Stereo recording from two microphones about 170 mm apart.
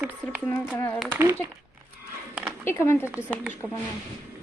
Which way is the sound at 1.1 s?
15° right (ahead or behind).